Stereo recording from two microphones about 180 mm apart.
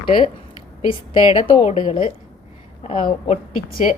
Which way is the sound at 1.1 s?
30° left (ahead or behind).